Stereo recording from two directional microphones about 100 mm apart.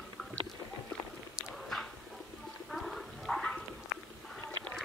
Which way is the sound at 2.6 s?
Centre (ahead or behind).